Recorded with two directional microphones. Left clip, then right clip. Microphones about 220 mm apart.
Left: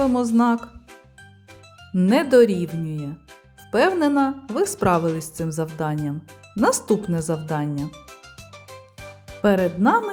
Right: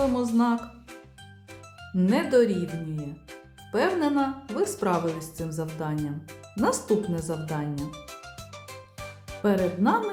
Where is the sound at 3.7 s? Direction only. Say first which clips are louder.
Left 6 dB; 35° left (ahead or behind).